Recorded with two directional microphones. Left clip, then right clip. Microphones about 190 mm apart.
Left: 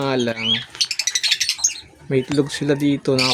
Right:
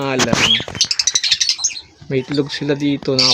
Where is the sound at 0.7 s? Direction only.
65° left (ahead or behind).